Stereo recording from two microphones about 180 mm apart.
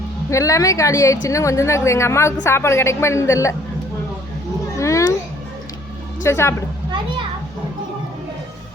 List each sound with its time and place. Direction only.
0.3 s a woman's voice: 15° left (ahead or behind)
4.8 s cat: 15° left (ahead or behind)
6.2 s a woman's voice: 15° left (ahead or behind)